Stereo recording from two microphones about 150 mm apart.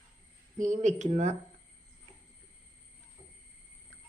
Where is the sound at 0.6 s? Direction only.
55° right (ahead or behind).